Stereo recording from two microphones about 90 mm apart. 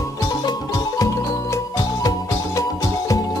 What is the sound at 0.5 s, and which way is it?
Music, 45° left (ahead or behind).